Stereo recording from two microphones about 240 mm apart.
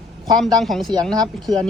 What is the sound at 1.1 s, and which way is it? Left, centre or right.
Speech, centre.